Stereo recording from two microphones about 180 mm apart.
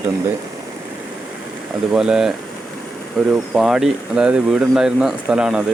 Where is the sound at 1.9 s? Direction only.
5° right (ahead or behind).